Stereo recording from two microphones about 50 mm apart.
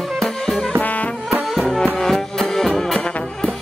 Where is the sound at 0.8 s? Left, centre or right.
Left.